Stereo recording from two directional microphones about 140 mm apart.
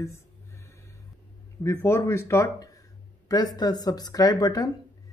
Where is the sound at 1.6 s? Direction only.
20° left (ahead or behind).